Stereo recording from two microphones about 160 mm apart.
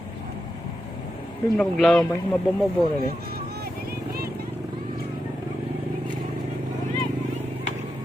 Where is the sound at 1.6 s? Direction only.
Centre (ahead or behind).